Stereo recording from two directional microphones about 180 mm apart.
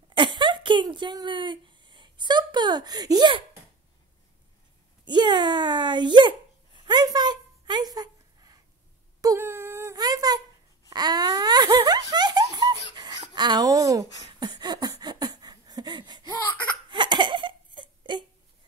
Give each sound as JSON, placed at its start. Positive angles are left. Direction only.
{"t": 0.1, "sound": "speech", "side_deg": -25}
{"t": 5.0, "sound": "a child's voice", "side_deg": -25}
{"t": 9.2, "sound": "wail", "side_deg": -15}
{"t": 10.9, "sound": "laughter", "side_deg": -20}
{"t": 14.4, "sound": "a sound", "side_deg": -25}
{"t": 16.9, "sound": "laughter", "side_deg": -25}